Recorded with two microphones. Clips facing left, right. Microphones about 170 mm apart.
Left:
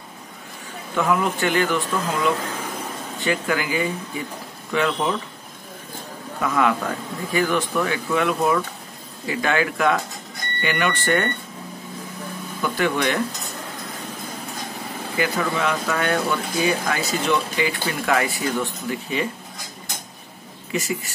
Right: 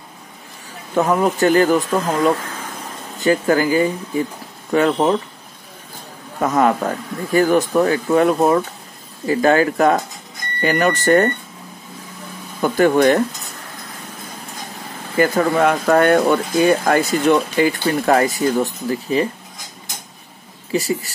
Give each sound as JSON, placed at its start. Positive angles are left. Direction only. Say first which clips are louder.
{"t": 0.9, "sound": "speech", "louder": "right 5 dB", "side_deg": -40}
{"t": 6.4, "sound": "speech", "louder": "right 5 dB", "side_deg": -40}
{"t": 12.6, "sound": "speech", "louder": "right 9 dB", "side_deg": -45}
{"t": 15.1, "sound": "speech", "louder": "right 8 dB", "side_deg": -45}
{"t": 20.7, "sound": "speech", "louder": "right 6 dB", "side_deg": -35}